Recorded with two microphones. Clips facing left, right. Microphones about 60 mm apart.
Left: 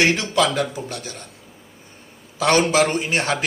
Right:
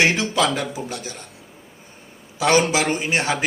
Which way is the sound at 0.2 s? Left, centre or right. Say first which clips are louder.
Left 1 dB; centre.